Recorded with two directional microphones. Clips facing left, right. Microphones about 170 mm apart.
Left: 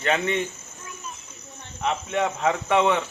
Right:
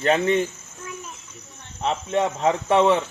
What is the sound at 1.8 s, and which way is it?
Speech, 35° right (ahead or behind).